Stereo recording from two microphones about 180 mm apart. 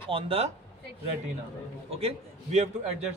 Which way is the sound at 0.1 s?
30° right (ahead or behind).